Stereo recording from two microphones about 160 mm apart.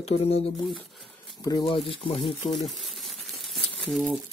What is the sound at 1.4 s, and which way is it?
Speech, 30° left (ahead or behind).